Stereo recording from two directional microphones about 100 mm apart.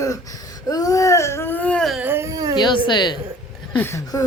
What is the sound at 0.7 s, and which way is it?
Baby cry, 35° left (ahead or behind).